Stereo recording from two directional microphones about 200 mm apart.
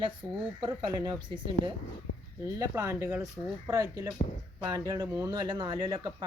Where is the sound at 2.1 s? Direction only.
80° left.